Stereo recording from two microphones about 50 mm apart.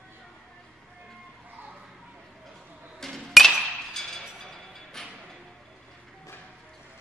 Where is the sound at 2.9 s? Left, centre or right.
Centre.